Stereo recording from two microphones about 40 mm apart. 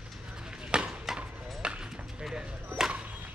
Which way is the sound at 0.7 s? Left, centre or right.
Right.